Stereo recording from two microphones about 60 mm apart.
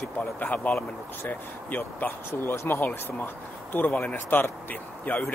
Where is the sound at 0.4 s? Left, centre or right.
Left.